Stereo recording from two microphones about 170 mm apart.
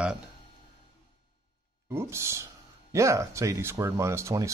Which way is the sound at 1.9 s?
15° right (ahead or behind).